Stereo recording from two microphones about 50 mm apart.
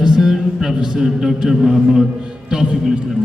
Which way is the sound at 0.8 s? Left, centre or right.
Centre.